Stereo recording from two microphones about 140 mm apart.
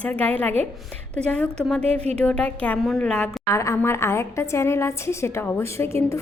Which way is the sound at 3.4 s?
20° left (ahead or behind).